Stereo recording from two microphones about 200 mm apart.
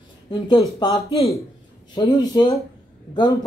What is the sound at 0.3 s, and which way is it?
Speech, 20° left (ahead or behind).